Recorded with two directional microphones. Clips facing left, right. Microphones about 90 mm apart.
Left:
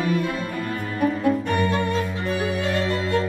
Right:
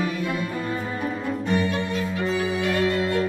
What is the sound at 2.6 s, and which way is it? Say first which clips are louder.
Music: right 1 dB; 30° left (ahead or behind).